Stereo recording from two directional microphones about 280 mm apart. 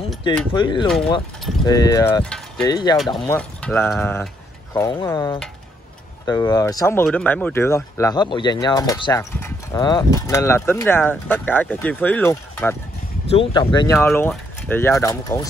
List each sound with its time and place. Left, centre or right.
0.5 s speech: centre
2.7 s speech: centre
3.0 s speech: centre